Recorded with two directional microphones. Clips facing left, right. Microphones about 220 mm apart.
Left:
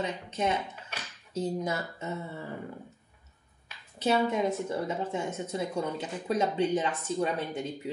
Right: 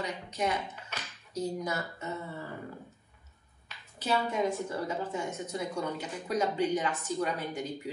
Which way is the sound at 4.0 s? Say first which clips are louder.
Left 4 dB; 25° left (ahead or behind).